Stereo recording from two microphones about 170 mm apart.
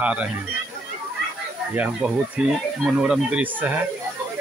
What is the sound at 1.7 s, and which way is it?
Speech, 5° right (ahead or behind).